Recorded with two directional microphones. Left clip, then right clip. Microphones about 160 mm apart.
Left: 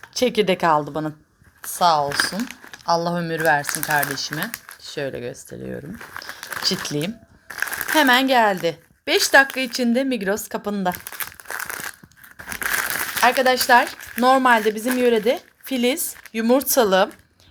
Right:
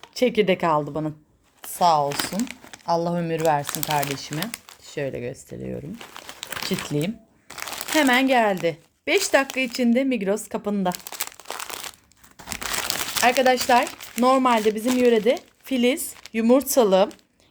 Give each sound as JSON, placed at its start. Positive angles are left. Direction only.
{"t": 0.2, "sound": "speech", "side_deg": -5}
{"t": 2.0, "sound": "speech", "side_deg": -55}
{"t": 2.4, "sound": "crumpling", "side_deg": -65}
{"t": 2.8, "sound": "speech", "side_deg": -10}
{"t": 6.1, "sound": "a sound", "side_deg": -5}
{"t": 7.6, "sound": "crumpling", "side_deg": -20}
{"t": 7.9, "sound": "speech", "side_deg": -5}
{"t": 11.1, "sound": "crumpling", "side_deg": -50}
{"t": 12.8, "sound": "speech", "side_deg": -5}